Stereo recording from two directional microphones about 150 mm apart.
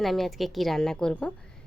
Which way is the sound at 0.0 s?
Centre (ahead or behind).